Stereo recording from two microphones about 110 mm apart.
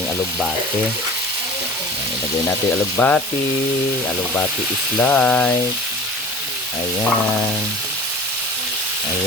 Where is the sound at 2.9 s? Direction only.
15° left (ahead or behind).